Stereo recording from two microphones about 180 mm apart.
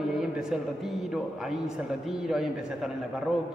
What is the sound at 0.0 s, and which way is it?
A man's voice, centre (ahead or behind).